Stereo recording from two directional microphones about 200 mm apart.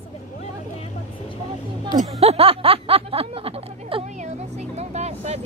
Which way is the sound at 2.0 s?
30° right (ahead or behind).